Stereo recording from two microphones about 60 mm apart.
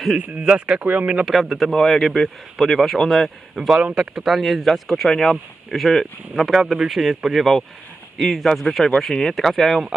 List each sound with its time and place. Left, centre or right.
0.3 s speech: centre
1.2 s speech: centre
3.8 s speech: centre
4.1 s speech: centre